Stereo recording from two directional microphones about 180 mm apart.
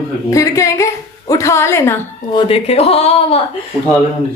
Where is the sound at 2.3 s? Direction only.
35° left (ahead or behind).